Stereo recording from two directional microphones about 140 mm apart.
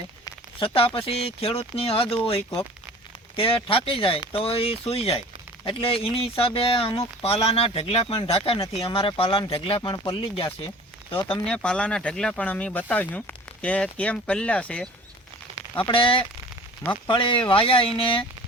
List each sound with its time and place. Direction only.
0.6 s speech: 40° left (ahead or behind)
11.4 s speech: 5° left (ahead or behind)
15.8 s speech: 40° left (ahead or behind)